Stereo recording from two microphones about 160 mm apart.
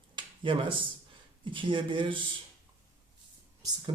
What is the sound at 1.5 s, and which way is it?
Speech, 30° right (ahead or behind).